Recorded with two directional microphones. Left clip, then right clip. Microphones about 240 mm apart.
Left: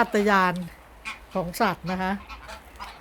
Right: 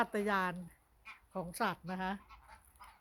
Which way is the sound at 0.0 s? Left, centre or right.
Centre.